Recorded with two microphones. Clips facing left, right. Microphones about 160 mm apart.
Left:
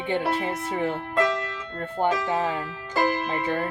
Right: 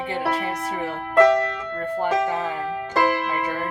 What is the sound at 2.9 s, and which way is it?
Music, 65° right (ahead or behind).